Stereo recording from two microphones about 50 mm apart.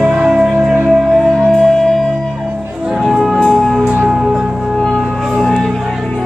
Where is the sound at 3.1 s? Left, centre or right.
Centre.